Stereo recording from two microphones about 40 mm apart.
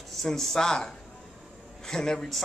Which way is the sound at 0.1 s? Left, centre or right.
Centre.